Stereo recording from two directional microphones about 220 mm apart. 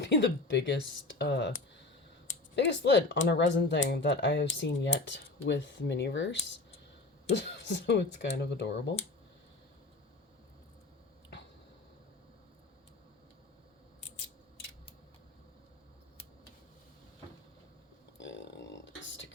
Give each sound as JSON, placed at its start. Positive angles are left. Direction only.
{"t": 0.0, "sound": "speech", "side_deg": 50}
{"t": 2.6, "sound": "speech", "side_deg": 50}
{"t": 18.2, "sound": "a sound", "side_deg": 55}